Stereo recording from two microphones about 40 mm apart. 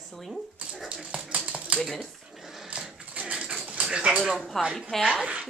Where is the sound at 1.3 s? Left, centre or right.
Right.